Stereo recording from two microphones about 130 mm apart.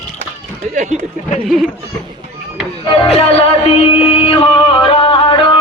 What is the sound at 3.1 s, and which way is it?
Music, 50° left (ahead or behind).